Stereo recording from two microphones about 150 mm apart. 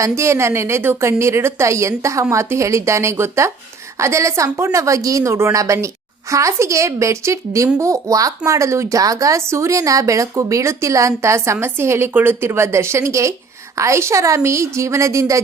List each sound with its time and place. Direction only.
0.0 s a woman's voice: 20° right (ahead or behind)